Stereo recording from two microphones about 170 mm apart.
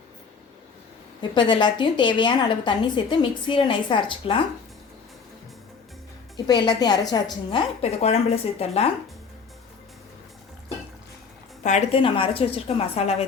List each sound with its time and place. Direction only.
1.3 s a woman's voice: 25° left (ahead or behind)
6.3 s a woman's voice: 25° left (ahead or behind)
11.6 s a woman's voice: 40° left (ahead or behind)